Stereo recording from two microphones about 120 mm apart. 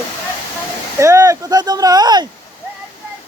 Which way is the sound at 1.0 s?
25° right (ahead or behind).